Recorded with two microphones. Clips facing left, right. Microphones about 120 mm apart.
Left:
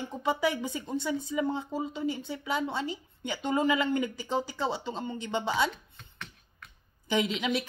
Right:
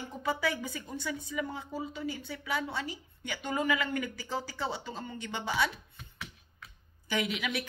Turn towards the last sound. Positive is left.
turn(degrees=25)  # may be behind; listen again after turning